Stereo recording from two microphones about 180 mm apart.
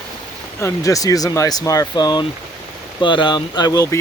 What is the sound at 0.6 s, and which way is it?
Speech, 20° left (ahead or behind).